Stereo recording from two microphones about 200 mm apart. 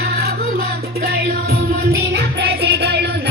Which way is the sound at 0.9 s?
50° right (ahead or behind).